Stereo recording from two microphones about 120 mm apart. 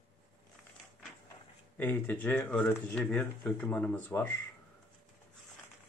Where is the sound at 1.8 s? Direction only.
15° left (ahead or behind).